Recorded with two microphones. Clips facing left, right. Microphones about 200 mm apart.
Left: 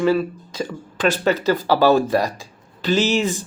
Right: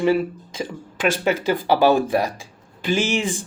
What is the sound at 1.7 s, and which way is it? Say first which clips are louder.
Speech: left 1 dB; 15° right (ahead or behind).